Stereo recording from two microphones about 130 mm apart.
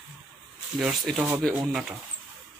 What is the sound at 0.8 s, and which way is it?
Speech, centre (ahead or behind).